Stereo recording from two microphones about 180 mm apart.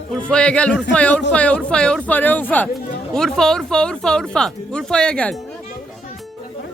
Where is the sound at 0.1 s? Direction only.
5° left (ahead or behind).